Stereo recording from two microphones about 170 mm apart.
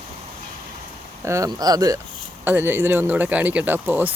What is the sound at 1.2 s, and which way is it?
Speech, 20° right (ahead or behind).